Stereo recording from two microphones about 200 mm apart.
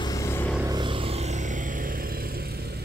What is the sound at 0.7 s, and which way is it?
Vehicle, 25° right (ahead or behind).